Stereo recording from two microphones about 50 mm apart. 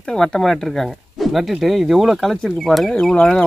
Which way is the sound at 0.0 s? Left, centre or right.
Centre.